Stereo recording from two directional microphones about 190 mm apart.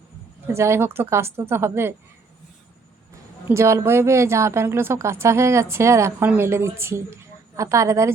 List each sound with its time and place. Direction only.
0.5 s speech: 15° right (ahead or behind)
3.4 s speech: 15° right (ahead or behind)